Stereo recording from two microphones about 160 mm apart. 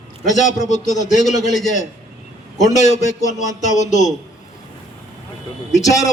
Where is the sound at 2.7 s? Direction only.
45° left (ahead or behind).